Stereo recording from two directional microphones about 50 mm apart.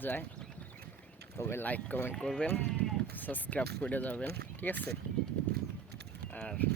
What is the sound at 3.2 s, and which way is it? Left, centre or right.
Speech, left.